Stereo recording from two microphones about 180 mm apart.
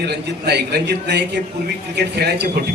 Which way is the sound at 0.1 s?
65° right (ahead or behind).